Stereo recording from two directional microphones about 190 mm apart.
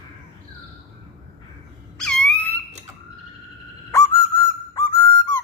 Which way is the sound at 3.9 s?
15° left (ahead or behind).